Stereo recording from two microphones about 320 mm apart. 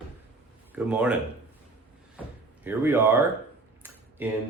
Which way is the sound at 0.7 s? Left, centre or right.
Centre.